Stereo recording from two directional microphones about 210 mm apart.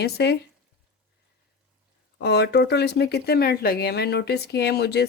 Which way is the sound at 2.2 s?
55° left (ahead or behind).